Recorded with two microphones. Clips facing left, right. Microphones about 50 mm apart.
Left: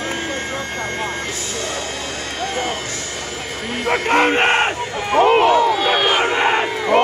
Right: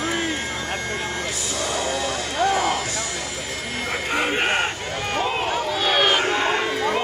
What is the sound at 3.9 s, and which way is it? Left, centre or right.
Crowd, left.